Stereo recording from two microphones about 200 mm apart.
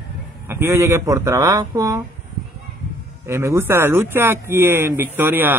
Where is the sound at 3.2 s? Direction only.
15° right (ahead or behind).